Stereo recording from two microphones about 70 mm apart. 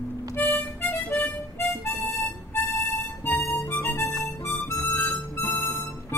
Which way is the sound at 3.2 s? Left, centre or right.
Left.